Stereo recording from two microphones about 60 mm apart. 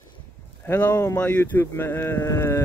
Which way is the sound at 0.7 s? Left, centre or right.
Left.